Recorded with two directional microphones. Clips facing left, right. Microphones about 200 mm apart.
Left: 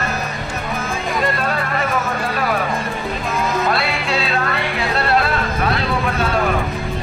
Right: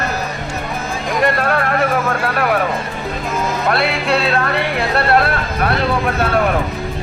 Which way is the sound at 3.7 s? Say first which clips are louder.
Right 4 dB; 60° right (ahead or behind).